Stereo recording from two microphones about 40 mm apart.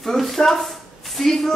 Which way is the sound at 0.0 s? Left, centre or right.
Centre.